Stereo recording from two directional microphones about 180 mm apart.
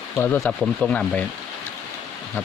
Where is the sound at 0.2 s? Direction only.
10° left (ahead or behind).